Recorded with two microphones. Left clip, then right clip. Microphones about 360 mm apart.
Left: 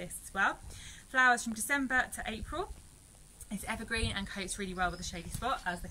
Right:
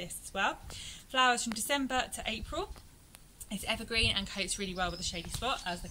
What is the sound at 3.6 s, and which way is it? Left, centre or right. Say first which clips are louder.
A woman's voice: right 5 dB; centre.